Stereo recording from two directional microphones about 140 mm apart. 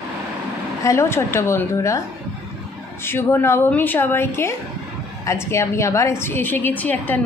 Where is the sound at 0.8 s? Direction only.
20° left (ahead or behind).